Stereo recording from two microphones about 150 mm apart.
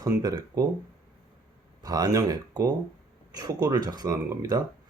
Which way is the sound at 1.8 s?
25° right (ahead or behind).